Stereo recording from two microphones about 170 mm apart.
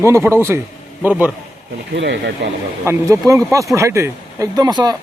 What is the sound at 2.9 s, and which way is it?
Speech, 15° right (ahead or behind).